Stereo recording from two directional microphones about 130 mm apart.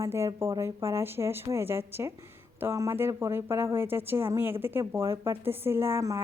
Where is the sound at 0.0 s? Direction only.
20° right (ahead or behind).